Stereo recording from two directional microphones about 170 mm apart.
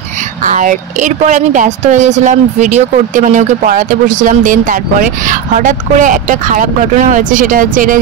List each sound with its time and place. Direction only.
0.4 s speech: 50° right (ahead or behind)